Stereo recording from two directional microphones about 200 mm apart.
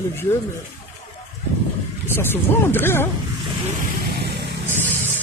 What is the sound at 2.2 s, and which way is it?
Speech, 10° left (ahead or behind).